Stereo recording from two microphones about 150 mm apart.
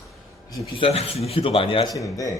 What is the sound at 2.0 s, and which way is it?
Speech, 20° left (ahead or behind).